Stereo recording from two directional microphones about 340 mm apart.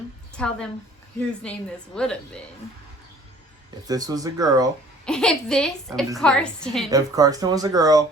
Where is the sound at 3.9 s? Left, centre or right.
Centre.